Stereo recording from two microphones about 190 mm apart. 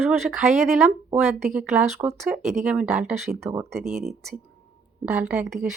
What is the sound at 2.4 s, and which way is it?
Speech, 35° right (ahead or behind).